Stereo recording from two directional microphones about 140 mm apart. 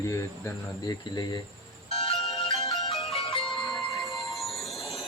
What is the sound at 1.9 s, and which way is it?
Music, centre (ahead or behind).